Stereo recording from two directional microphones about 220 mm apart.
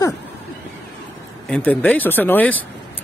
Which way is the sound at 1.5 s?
5° left (ahead or behind).